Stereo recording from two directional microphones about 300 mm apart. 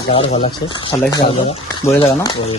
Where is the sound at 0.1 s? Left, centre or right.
Centre.